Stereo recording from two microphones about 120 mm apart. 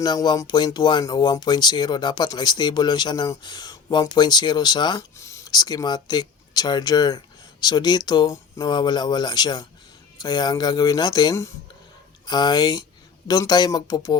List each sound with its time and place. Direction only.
0.0 s speech: 35° left (ahead or behind)
5.1 s speech: 25° left (ahead or behind)